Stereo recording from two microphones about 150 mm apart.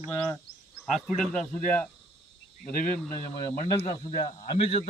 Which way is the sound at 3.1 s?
20° left (ahead or behind).